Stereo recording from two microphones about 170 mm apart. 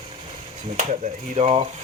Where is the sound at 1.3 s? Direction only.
35° right (ahead or behind).